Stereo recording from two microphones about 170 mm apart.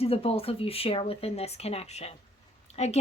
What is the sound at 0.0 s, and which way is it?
A woman's voice, 35° left (ahead or behind).